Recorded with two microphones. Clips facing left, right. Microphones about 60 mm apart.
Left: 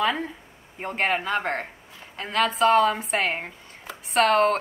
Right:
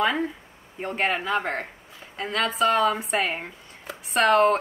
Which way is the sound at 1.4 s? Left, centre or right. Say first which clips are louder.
Left 1 dB; left.